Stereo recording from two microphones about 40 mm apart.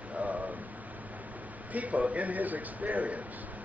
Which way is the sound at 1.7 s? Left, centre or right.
Right.